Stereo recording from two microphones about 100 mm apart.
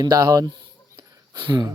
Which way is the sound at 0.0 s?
40° right (ahead or behind).